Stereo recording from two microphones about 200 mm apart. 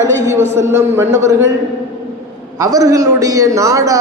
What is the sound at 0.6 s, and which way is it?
Speech, 15° right (ahead or behind).